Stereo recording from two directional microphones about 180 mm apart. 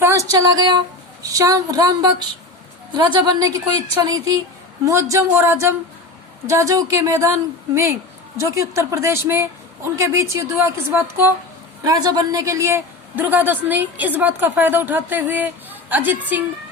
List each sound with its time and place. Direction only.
0.0 s music: 15° right (ahead or behind)
1.2 s a woman's voice: 20° right (ahead or behind)
8.4 s a woman's voice: 15° right (ahead or behind)